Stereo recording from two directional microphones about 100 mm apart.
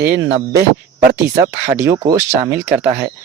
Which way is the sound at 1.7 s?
30° right (ahead or behind).